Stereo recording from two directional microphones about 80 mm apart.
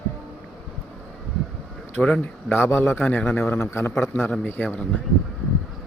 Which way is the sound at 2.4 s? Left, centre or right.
Left.